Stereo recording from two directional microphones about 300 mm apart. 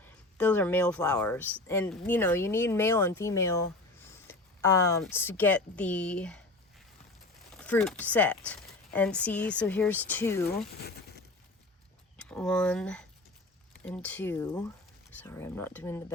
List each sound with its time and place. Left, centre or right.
0.0 s speech: centre
10.4 s speech: left
12.1 s speech: centre